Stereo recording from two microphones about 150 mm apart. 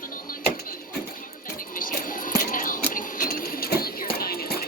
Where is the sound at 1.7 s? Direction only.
65° left (ahead or behind).